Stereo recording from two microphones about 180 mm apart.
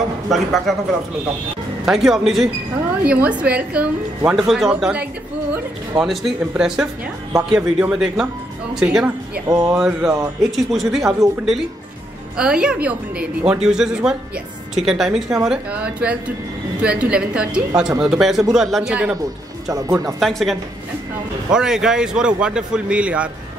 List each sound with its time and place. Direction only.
0.3 s a man's voice: centre (ahead or behind)
1.9 s a man's voice: centre (ahead or behind)
9.5 s speech: 20° right (ahead or behind)
9.8 s a man's voice: centre (ahead or behind)
19.7 s speech: 20° right (ahead or behind)
20.2 s a man's voice: centre (ahead or behind)